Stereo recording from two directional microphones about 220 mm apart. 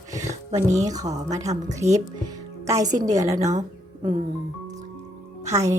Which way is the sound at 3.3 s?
35° right (ahead or behind).